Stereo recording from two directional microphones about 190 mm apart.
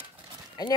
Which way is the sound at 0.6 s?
20° left (ahead or behind).